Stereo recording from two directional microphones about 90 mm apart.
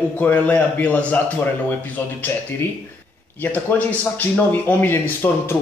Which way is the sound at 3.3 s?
20° left (ahead or behind).